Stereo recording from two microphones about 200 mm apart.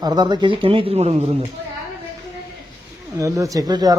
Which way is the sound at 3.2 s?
15° right (ahead or behind).